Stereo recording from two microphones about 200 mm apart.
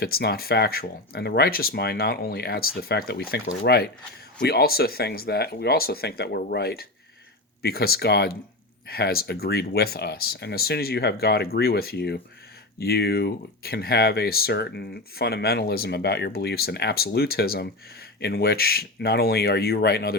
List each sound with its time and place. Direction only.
0.0 s speech: 50° left (ahead or behind)